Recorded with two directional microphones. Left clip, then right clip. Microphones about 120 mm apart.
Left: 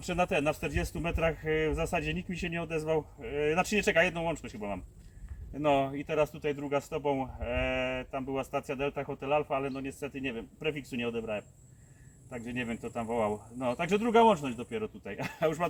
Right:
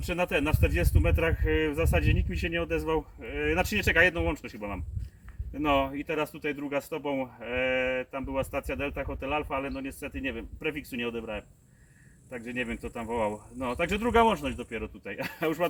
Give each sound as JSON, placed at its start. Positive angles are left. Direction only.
{"t": 0.0, "sound": "speech", "side_deg": 15}